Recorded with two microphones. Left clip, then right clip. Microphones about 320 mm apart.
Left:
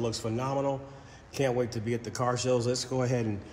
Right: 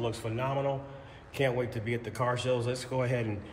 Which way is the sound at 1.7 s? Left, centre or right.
Centre.